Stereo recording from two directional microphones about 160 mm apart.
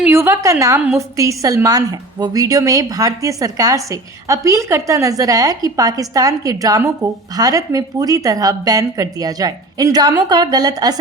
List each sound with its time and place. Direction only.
0.0 s a woman's voice: 15° right (ahead or behind)